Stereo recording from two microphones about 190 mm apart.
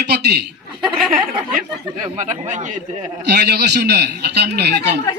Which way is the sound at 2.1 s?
40° right (ahead or behind).